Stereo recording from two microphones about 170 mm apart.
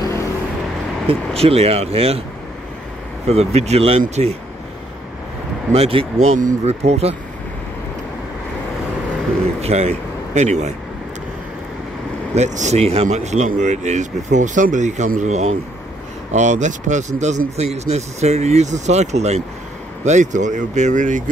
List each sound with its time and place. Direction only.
1.0 s speech: 35° right (ahead or behind)
3.3 s speech: 40° right (ahead or behind)
5.7 s speech: 35° right (ahead or behind)
9.6 s speech: 40° right (ahead or behind)
12.4 s speech: 45° right (ahead or behind)